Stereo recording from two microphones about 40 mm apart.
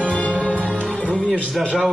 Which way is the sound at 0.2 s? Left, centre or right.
Left.